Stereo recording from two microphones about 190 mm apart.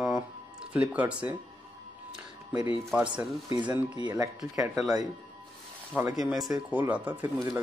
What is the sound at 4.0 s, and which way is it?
Speech, 20° right (ahead or behind).